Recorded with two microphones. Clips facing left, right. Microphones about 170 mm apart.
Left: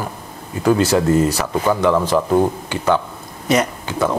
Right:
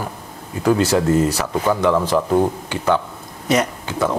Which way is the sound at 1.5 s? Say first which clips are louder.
Left 1 dB; 20° left (ahead or behind).